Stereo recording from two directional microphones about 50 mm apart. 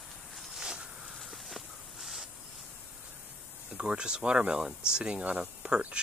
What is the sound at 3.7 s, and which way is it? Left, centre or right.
Speech, centre.